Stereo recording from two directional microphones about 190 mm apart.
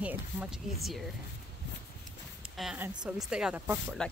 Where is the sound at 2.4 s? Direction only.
5° right (ahead or behind).